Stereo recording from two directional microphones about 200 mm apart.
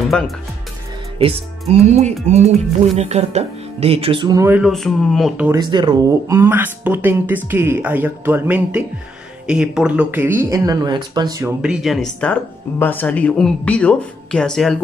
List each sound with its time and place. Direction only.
0.1 s speech: 5° left (ahead or behind)
1.2 s speech: 30° right (ahead or behind); by 5.5 s centre (ahead or behind)
5.5 s speech: 20° right (ahead or behind)
11.6 s speech: centre (ahead or behind)